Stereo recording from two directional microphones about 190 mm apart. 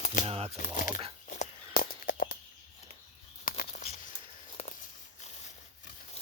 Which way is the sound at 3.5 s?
45° left (ahead or behind).